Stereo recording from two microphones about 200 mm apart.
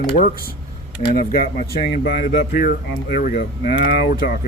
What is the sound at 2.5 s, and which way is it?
Speech, 45° left (ahead or behind).